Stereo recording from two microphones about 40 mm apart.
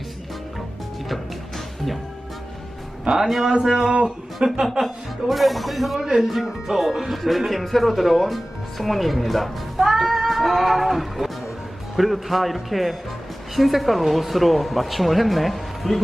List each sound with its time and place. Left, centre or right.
1.0 s music: centre
3.1 s a man's voice: right; by 4.8 s centre
5.3 s speech: centre
8.8 s music: centre
11.9 s speech: centre